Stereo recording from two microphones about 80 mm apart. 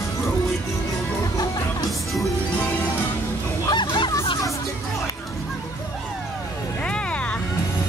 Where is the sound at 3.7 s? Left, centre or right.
Left.